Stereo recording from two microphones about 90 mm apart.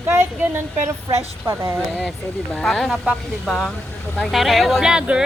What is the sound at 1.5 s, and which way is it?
Speech, 30° right (ahead or behind).